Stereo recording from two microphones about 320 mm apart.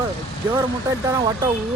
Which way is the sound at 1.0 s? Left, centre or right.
Centre.